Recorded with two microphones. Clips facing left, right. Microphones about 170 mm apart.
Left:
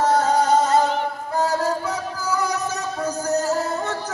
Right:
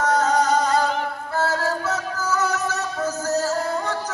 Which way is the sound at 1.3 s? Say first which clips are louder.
Left 2 dB; 15° left (ahead or behind).